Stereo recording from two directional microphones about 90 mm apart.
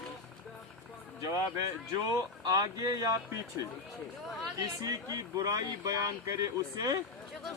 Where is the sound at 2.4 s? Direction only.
45° right (ahead or behind).